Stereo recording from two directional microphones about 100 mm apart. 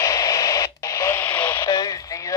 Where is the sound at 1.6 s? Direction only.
35° left (ahead or behind).